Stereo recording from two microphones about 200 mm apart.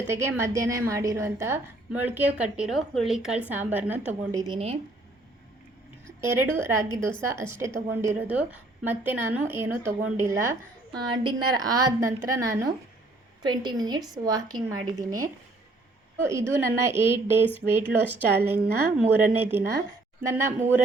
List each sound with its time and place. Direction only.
0.1 s a woman's voice: 15° right (ahead or behind)
6.2 s a woman's voice: 10° right (ahead or behind)
11.1 s a woman's voice: 25° right (ahead or behind)